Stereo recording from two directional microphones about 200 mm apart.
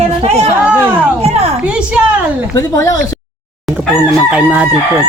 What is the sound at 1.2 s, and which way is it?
Speech, 30° right (ahead or behind).